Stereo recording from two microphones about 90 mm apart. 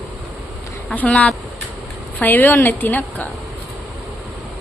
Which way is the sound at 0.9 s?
15° left (ahead or behind).